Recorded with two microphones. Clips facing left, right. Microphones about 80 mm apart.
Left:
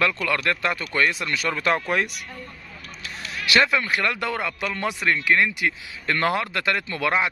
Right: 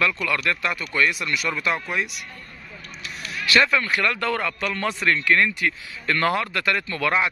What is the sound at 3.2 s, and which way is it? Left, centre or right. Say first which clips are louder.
Speech: even; left.